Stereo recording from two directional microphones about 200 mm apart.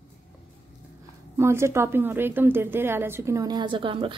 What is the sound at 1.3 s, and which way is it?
A woman's voice, 15° right (ahead or behind).